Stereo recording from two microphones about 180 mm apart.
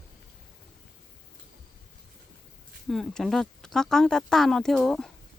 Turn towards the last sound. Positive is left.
turn(degrees=0)  # may be behind; listen again after turning